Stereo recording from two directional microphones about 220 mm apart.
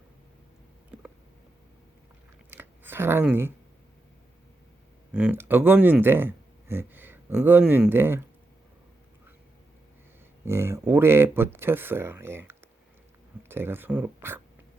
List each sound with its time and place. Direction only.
2.5 s a sound: 10° right (ahead or behind)
5.1 s speech: 5° right (ahead or behind)
10.4 s speech: 10° right (ahead or behind)